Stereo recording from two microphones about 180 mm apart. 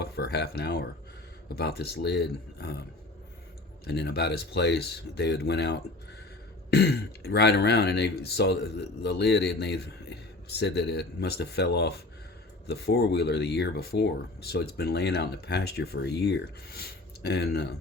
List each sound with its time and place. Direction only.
0.0 s a sound: 65° left (ahead or behind)
1.5 s speech: 60° left (ahead or behind)
3.8 s speech: 65° left (ahead or behind)